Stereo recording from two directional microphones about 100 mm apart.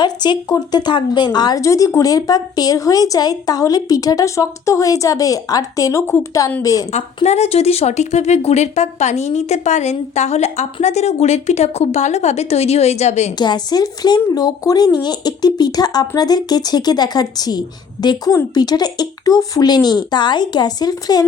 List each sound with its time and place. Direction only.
0.0 s a woman's voice: 45° left (ahead or behind)
6.9 s a woman's voice: 90° left
13.4 s speech: 45° left (ahead or behind)